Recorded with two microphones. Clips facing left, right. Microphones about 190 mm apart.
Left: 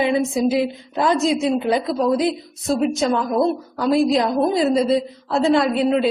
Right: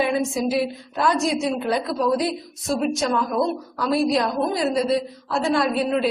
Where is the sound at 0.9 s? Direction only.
20° left (ahead or behind).